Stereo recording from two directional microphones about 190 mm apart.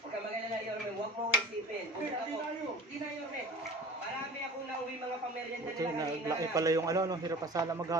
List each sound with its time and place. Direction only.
5.8 s a man's voice: 20° right (ahead or behind)